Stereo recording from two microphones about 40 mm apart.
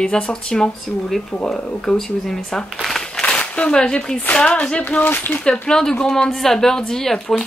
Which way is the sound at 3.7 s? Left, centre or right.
Left.